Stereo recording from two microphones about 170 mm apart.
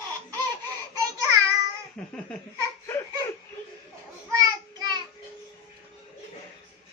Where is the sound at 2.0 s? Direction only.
5° left (ahead or behind).